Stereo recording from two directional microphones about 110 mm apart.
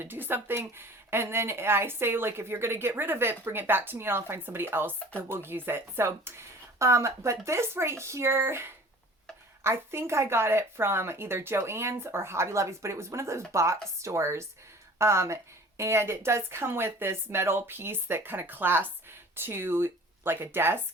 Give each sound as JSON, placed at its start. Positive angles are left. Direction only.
{"t": 0.0, "sound": "speech", "side_deg": -20}